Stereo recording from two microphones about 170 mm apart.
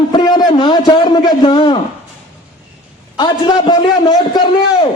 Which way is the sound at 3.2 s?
25° left (ahead or behind).